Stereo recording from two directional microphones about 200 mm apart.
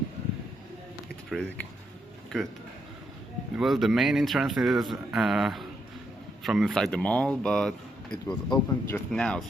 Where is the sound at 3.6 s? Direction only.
Centre (ahead or behind).